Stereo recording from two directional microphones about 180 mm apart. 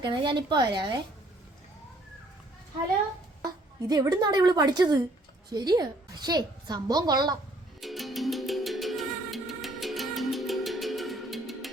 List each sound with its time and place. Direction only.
0.0 s a woman's voice: 25° right (ahead or behind)
3.4 s a woman's voice: 20° right (ahead or behind)
7.8 s music: centre (ahead or behind)